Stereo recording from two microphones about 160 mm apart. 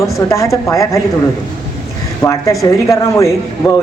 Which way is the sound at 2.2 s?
20° left (ahead or behind).